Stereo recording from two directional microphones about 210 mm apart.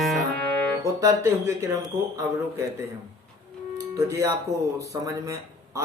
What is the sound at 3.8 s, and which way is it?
Speech, 15° right (ahead or behind).